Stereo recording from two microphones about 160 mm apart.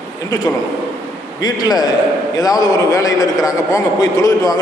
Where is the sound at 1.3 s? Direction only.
25° left (ahead or behind).